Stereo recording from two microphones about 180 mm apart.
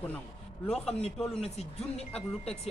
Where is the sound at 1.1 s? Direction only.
Centre (ahead or behind).